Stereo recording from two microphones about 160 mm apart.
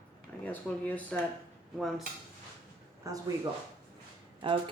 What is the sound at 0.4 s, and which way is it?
Speech, 10° left (ahead or behind).